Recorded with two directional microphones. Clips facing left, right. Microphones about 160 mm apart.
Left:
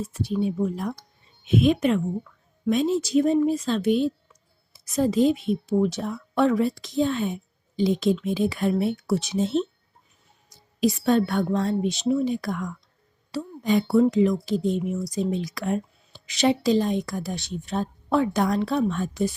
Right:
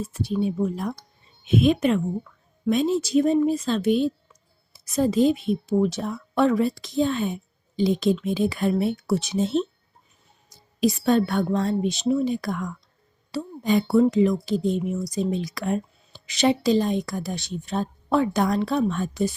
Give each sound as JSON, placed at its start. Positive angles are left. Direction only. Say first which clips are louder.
{"t": 0.1, "sound": "speech", "louder": "right 1 dB", "side_deg": -30}
{"t": 10.8, "sound": "speech", "louder": "right 1 dB", "side_deg": -30}